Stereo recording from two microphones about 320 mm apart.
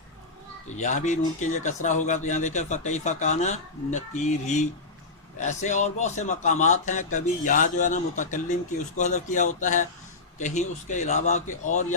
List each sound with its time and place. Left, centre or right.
0.7 s speech: left